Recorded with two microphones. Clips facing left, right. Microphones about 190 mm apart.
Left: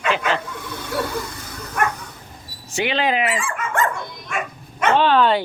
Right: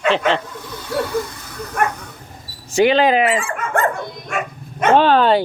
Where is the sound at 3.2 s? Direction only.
60° right (ahead or behind).